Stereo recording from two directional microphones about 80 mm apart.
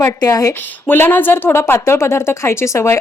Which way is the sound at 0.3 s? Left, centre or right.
Left.